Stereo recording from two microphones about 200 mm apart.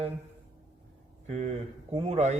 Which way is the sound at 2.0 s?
30° right (ahead or behind).